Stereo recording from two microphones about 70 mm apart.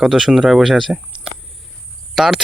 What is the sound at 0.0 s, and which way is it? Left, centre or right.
Speech, centre.